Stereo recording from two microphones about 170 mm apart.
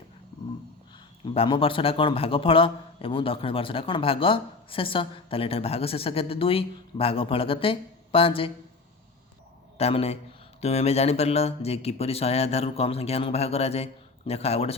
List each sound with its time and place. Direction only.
1.2 s a man's voice: 30° left (ahead or behind)
9.7 s a man's voice: 35° left (ahead or behind)